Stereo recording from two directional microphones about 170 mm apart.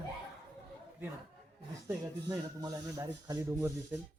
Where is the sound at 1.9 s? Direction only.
20° right (ahead or behind).